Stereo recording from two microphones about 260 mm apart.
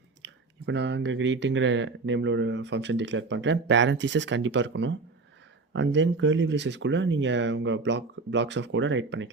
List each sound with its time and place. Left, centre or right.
0.2 s speech: right